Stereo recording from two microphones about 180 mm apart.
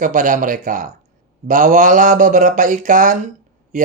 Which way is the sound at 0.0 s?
45° right (ahead or behind).